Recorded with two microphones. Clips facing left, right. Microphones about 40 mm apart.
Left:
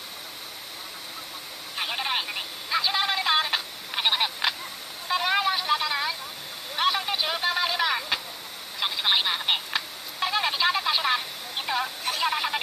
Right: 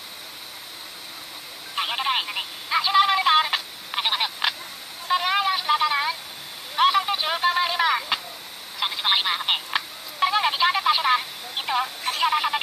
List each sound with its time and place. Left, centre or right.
1.8 s telephone: centre
5.0 s vehicle: centre
5.6 s a sound: centre
8.7 s telephone: centre
9.7 s telephone dialing: right
10.4 s telephone: centre
11.0 s vehicle: centre